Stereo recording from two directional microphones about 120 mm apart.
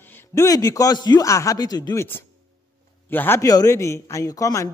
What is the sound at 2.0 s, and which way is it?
A man's voice, 20° left (ahead or behind).